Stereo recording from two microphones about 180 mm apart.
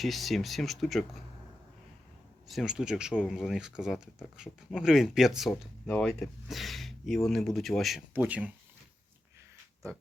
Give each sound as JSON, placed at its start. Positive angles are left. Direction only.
{"t": 0.0, "sound": "speech", "side_deg": 0}
{"t": 2.5, "sound": "speech", "side_deg": 0}